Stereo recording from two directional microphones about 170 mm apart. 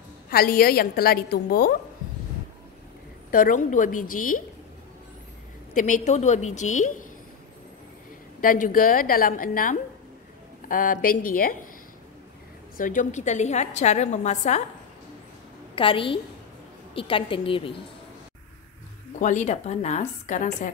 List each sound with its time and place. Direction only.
0.3 s a woman's voice: 60° left (ahead or behind)
3.3 s a woman's voice: 55° left (ahead or behind)
5.8 s a woman's voice: 45° left (ahead or behind)
8.4 s a woman's voice: 50° left (ahead or behind)
12.7 s a woman's voice: 50° left (ahead or behind)
15.7 s a woman's voice: 30° left (ahead or behind)
19.1 s a woman's voice: 45° left (ahead or behind)